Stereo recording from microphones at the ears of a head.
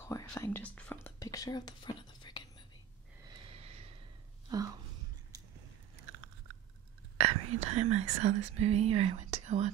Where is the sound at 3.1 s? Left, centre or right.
Right.